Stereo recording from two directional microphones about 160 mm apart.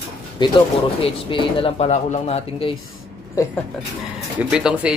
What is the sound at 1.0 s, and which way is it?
Speech, 35° left (ahead or behind).